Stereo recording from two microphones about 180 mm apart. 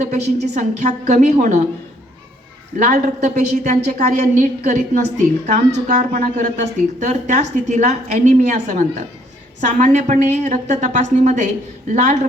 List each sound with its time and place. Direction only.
0.0 s a woman's voice: 40° right (ahead or behind)
2.7 s a woman's voice: 40° right (ahead or behind)